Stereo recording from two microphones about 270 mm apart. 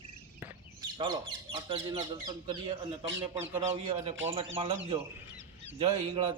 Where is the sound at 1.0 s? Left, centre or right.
Centre.